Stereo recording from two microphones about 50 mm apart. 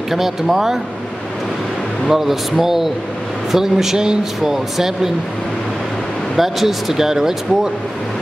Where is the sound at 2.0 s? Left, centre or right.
Centre.